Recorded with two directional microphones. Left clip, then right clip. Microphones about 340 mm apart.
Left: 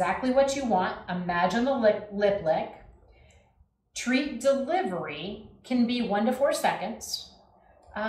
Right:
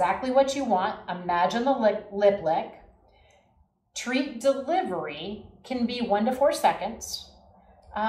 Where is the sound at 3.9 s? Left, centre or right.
Centre.